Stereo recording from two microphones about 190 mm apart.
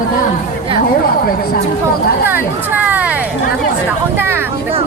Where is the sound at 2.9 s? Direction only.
10° right (ahead or behind).